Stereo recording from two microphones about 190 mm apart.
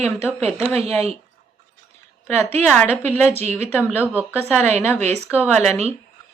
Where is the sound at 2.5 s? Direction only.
10° left (ahead or behind).